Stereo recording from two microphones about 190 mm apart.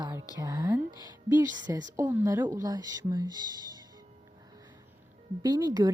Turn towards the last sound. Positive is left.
turn(degrees=-20)  # may be behind; listen again after turning